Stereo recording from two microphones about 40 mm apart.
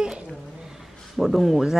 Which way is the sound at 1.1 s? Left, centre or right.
Centre.